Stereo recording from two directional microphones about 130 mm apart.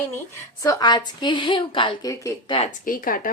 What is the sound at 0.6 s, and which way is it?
A woman's voice, 30° left (ahead or behind).